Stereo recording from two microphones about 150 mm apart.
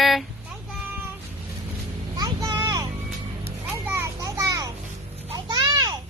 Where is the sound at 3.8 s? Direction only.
15° right (ahead or behind).